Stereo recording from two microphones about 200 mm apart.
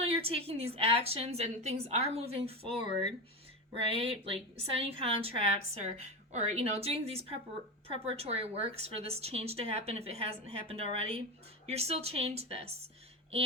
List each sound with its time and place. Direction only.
0.0 s a woman's voice: 30° right (ahead or behind)
2.8 s speech: 35° left (ahead or behind)
3.8 s a woman's voice: 30° right (ahead or behind)